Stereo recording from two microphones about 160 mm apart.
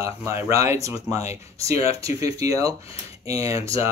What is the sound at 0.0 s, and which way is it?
Speech, 20° right (ahead or behind).